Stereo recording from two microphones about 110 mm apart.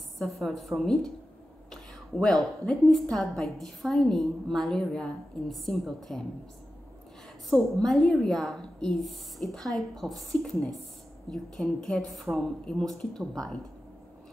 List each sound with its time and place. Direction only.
0.2 s a woman's voice: centre (ahead or behind)
7.4 s a woman's voice: 5° left (ahead or behind)